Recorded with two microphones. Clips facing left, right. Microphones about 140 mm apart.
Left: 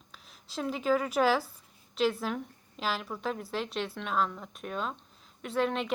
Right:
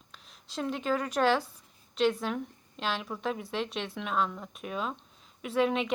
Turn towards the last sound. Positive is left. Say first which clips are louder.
# right 2 dB
turn(degrees=0)  # may be behind; listen again after turning